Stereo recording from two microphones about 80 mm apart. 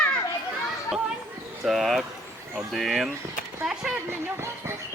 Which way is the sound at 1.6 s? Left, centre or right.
Centre.